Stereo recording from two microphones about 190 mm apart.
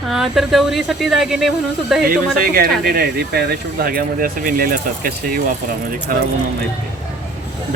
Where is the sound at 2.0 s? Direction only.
50° right (ahead or behind).